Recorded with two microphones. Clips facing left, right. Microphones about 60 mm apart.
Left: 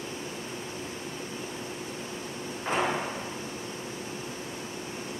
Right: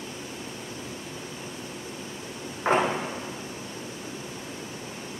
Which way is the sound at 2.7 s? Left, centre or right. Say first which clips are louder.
Right 7 dB; right.